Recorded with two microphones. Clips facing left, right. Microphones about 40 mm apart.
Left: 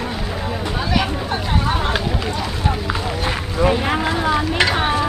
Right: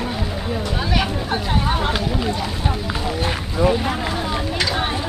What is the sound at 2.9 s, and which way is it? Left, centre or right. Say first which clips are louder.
Run: left 1 dB; centre.